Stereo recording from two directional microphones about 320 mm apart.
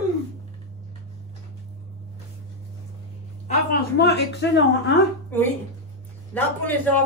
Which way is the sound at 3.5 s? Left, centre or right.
Left.